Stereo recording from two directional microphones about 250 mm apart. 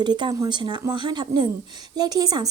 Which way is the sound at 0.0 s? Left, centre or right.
Centre.